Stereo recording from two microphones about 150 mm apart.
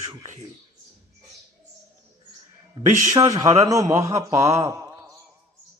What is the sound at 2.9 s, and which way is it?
Speech, 55° right (ahead or behind).